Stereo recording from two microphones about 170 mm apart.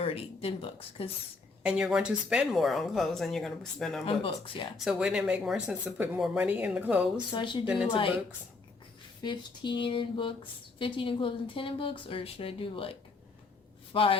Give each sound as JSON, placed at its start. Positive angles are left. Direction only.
{"t": 0.0, "sound": "a woman's voice", "side_deg": 35}
{"t": 1.6, "sound": "speech", "side_deg": -5}
{"t": 4.3, "sound": "a woman's voice", "side_deg": 30}
{"t": 4.8, "sound": "speech", "side_deg": 0}
{"t": 7.3, "sound": "a sound", "side_deg": 30}
{"t": 7.6, "sound": "speech", "side_deg": -5}
{"t": 7.9, "sound": "a woman's voice", "side_deg": 30}
{"t": 9.2, "sound": "a sound", "side_deg": 25}
{"t": 10.8, "sound": "a woman's voice", "side_deg": 30}
{"t": 13.9, "sound": "a woman's voice", "side_deg": 30}